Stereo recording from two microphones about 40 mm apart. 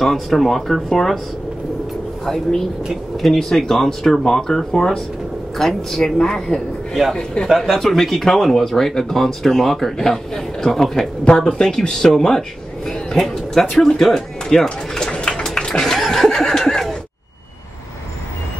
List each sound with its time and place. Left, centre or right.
0.0 s speech: centre
3.2 s speech: centre
7.4 s a man's voice: centre
7.8 s speech: centre
11.2 s speech: centre
15.4 s a sound: centre